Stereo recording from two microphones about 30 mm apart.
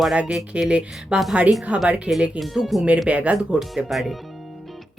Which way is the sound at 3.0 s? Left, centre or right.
Right.